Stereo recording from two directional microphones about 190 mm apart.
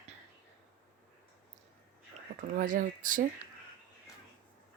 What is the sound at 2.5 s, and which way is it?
Speech, 45° right (ahead or behind).